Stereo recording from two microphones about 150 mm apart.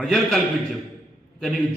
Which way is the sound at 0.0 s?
5° left (ahead or behind).